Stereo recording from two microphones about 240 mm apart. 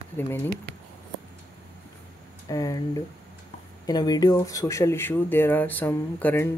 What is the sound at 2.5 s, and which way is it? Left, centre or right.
Speech, centre.